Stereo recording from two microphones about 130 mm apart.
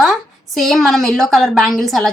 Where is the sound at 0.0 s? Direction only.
Centre (ahead or behind).